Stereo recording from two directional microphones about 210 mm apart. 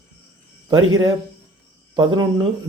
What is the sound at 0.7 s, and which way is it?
Speech, 20° right (ahead or behind).